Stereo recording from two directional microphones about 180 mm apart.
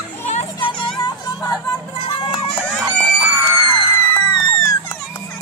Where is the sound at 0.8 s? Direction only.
20° left (ahead or behind).